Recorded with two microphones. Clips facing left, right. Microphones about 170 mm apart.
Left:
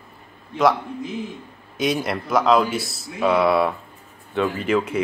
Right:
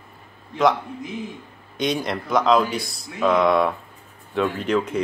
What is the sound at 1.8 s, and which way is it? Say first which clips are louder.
Speech: left 1 dB; 5° left (ahead or behind).